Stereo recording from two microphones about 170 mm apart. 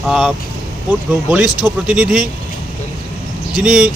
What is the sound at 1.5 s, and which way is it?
Speech, 25° left (ahead or behind).